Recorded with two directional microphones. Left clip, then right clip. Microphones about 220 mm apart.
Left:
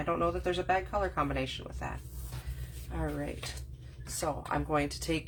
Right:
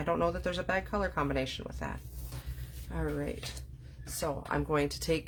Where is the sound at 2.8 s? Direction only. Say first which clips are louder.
Right 1 dB; 45° right (ahead or behind).